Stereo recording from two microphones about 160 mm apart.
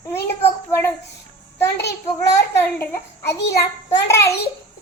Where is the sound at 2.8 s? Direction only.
15° left (ahead or behind).